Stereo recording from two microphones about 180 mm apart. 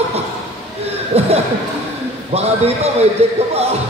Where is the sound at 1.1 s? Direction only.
35° right (ahead or behind).